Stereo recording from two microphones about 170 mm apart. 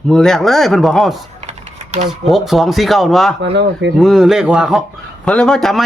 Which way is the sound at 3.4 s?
85° right.